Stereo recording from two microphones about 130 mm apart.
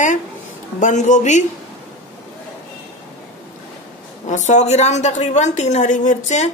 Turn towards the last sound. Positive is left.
turn(degrees=70)  # may be behind; listen again after turning